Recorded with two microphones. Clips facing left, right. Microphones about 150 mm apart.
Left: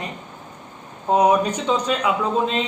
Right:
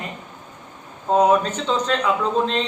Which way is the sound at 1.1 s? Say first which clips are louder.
Even; 15° left (ahead or behind).